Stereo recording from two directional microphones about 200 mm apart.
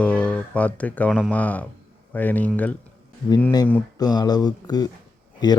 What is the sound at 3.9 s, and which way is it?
Speech, 20° left (ahead or behind).